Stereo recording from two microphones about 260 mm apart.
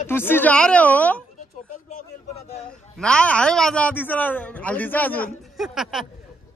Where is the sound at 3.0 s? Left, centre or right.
Centre.